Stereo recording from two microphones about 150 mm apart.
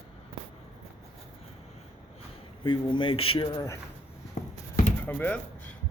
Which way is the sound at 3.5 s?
20° left (ahead or behind).